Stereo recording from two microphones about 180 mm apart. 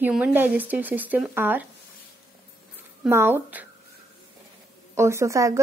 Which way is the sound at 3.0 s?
15° right (ahead or behind).